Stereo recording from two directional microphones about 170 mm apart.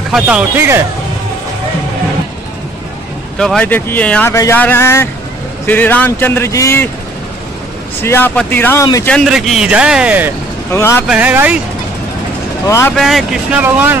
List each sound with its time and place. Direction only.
0.1 s speech: 10° right (ahead or behind)
3.3 s speech: 5° left (ahead or behind)
8.0 s speech: 15° left (ahead or behind); by 10.3 s 10° right (ahead or behind)
10.7 s speech: 15° left (ahead or behind)
11.1 s speech: 10° right (ahead or behind)
12.6 s speech: 15° left (ahead or behind)
12.9 s speech: centre (ahead or behind)